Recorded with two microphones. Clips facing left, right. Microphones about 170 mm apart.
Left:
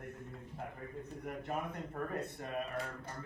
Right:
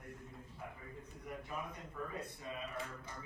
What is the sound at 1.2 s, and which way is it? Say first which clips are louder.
Speech: left 5 dB; 60° left (ahead or behind).